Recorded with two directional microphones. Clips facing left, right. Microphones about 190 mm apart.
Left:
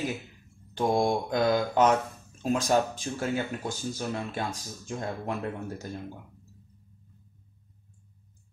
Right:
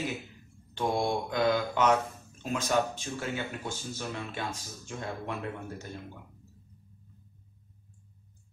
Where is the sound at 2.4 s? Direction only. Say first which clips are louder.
Left 4 dB; 40° left (ahead or behind).